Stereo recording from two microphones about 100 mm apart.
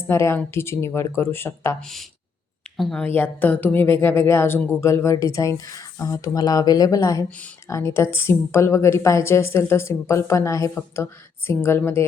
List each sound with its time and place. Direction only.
0.1 s a woman's voice: 30° left (ahead or behind)
1.8 s speech: centre (ahead or behind)
3.2 s a woman's voice: 15° left (ahead or behind); by 7.3 s 35° left (ahead or behind)
7.3 s speech: 15° left (ahead or behind)
7.7 s a woman's voice: 30° left (ahead or behind)